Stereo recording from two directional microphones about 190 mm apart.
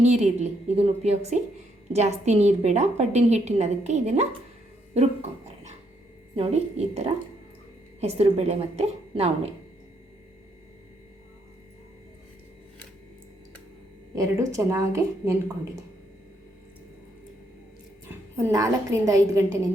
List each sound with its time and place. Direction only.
0.0 s a woman's voice: 35° right (ahead or behind)
6.3 s a woman's voice: 35° right (ahead or behind)
14.2 s a woman's voice: 15° right (ahead or behind)
18.1 s a woman's voice: 15° right (ahead or behind)